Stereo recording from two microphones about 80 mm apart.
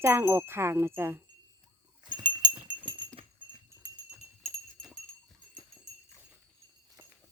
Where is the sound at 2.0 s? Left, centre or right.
Right.